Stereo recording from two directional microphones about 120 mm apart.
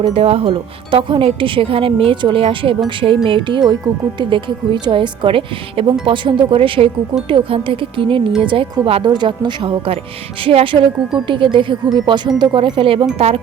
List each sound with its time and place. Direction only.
0.0 s speech: 55° right (ahead or behind)